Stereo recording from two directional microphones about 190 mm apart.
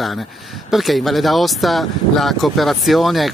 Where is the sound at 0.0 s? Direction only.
Centre (ahead or behind).